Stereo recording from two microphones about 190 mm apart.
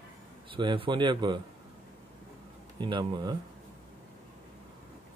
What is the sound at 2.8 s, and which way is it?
Speech, 20° right (ahead or behind).